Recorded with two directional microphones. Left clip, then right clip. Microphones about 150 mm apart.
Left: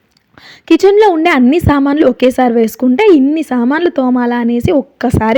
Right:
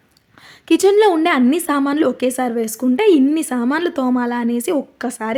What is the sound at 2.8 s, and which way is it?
A woman's voice, 30° left (ahead or behind).